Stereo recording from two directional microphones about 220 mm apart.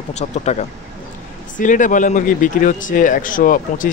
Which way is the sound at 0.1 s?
30° left (ahead or behind).